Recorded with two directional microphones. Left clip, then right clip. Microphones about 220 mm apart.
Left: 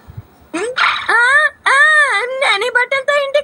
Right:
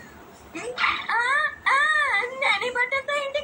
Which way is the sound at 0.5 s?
55° left (ahead or behind).